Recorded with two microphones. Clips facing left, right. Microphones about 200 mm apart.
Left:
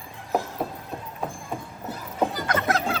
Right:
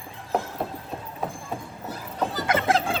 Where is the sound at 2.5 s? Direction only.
25° right (ahead or behind).